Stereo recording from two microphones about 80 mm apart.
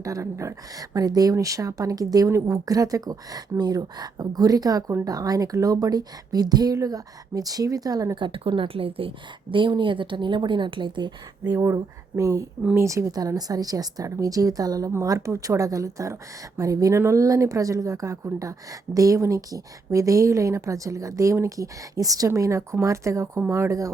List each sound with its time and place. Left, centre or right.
0.0 s speech: right
8.1 s speech: right
11.5 s speech: right